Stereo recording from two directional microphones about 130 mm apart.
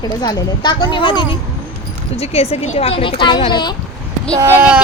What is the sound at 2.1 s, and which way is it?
Speech, 50° left (ahead or behind).